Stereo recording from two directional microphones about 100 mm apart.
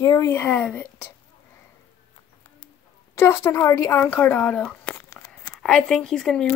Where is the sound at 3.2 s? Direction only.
30° left (ahead or behind); by 6.4 s 5° left (ahead or behind).